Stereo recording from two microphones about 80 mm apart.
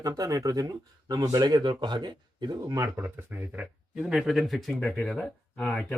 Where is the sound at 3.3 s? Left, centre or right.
Right.